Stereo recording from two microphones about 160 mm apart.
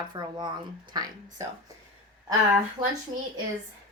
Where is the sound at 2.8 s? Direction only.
30° right (ahead or behind).